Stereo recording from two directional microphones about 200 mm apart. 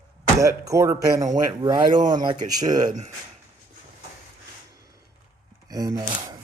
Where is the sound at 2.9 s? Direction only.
35° right (ahead or behind).